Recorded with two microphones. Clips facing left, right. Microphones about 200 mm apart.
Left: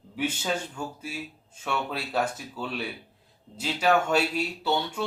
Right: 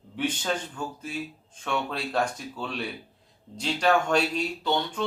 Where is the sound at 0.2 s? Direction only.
5° left (ahead or behind).